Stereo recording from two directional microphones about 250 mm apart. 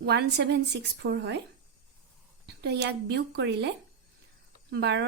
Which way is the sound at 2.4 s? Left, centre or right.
Right.